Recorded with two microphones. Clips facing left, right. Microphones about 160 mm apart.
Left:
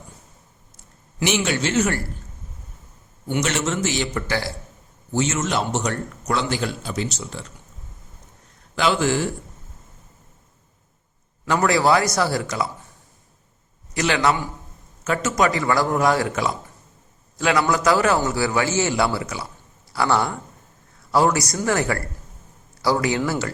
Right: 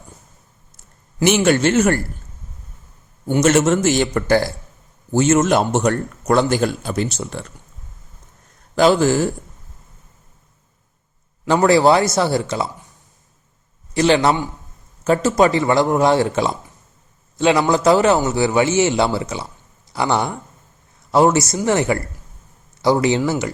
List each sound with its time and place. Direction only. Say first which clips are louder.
1.2 s a man's voice: right 7 dB; 50° right (ahead or behind)
3.2 s a man's voice: right 9 dB; 45° right (ahead or behind)
8.7 s a man's voice: right 6 dB; 40° right (ahead or behind)
11.4 s a man's voice: right 5 dB; 30° right (ahead or behind)
13.9 s a man's voice: right 5 dB; 30° right (ahead or behind)